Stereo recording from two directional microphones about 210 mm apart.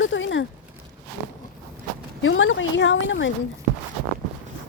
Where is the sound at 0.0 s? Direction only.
60° left (ahead or behind).